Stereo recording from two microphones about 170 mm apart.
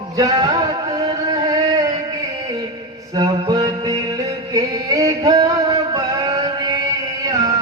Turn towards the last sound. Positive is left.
turn(degrees=-20)  # may be behind; listen again after turning